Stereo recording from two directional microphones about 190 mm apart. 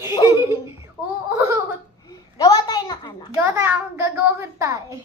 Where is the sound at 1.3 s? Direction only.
15° right (ahead or behind).